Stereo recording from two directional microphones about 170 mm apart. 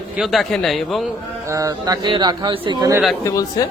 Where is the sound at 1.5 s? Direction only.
20° right (ahead or behind).